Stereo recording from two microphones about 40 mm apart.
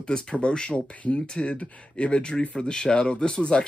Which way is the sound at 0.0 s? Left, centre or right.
Left.